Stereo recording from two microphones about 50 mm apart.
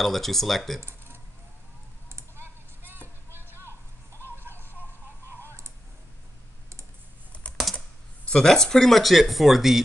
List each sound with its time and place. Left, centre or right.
0.0 s speech: centre
0.7 s keys jangling: right
2.0 s clicking: right
3.3 s a sound: right
3.6 s a sound: left
7.6 s typing: centre
8.3 s speech: centre